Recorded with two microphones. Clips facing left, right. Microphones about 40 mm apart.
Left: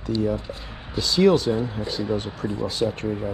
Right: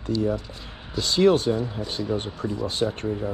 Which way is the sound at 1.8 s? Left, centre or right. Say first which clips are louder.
Left 2 dB; right.